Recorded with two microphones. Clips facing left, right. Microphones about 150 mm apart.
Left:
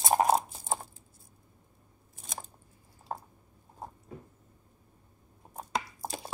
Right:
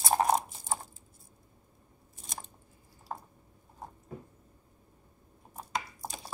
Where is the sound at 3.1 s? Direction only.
40° left (ahead or behind).